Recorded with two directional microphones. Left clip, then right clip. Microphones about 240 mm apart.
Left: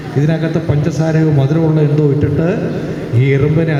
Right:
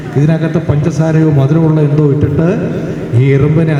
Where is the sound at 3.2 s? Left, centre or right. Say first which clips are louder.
Right 2 dB; right.